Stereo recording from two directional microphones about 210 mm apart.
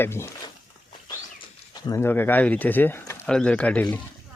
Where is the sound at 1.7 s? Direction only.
15° left (ahead or behind).